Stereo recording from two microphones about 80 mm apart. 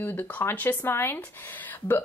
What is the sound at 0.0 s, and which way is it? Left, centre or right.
Speech, left.